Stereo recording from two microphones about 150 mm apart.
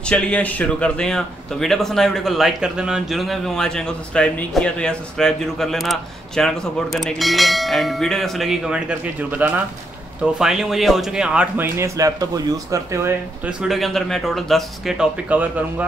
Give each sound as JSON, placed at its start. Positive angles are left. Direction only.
{"t": 0.1, "sound": "a man's voice", "side_deg": 10}
{"t": 13.6, "sound": "a man's voice", "side_deg": 0}